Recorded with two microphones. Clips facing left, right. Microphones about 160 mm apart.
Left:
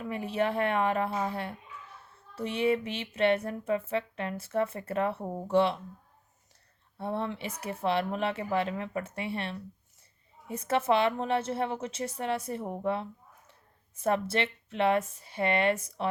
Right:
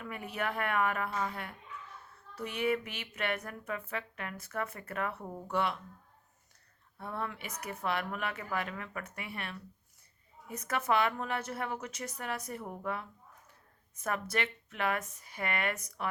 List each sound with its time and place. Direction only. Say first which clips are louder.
0.0 s speech: left 7 dB; 25° left (ahead or behind)
7.0 s speech: left 6 dB; 25° left (ahead or behind)